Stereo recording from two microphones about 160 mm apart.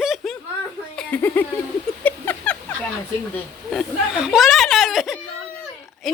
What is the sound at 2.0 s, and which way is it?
Rodents, 10° left (ahead or behind).